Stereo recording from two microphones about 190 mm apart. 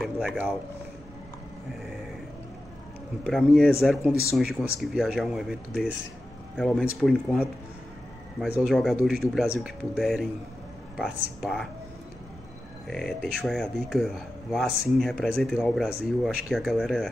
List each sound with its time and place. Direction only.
0.0 s a sound: centre (ahead or behind)
3.3 s speech: centre (ahead or behind)
8.5 s speech: centre (ahead or behind)
12.8 s speech: centre (ahead or behind)